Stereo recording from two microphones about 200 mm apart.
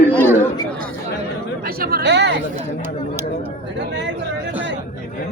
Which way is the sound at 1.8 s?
50° right (ahead or behind).